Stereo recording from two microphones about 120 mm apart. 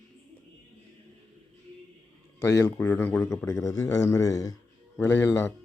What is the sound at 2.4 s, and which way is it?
A man's voice, 25° left (ahead or behind).